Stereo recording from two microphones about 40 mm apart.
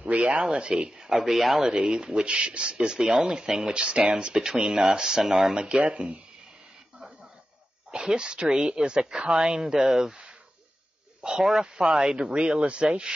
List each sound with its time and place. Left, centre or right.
0.0 s a sound: right
0.6 s a woman's voice: right
1.1 s speech: centre
1.6 s a woman's voice: centre
3.0 s a woman's voice: centre
5.2 s speech: centre
5.6 s a woman's voice: right
7.9 s a woman's voice: centre
11.2 s a woman's voice: centre